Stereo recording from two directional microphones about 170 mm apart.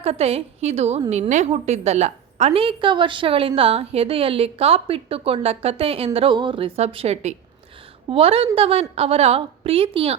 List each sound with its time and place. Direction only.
0.0 s a woman's voice: 35° right (ahead or behind)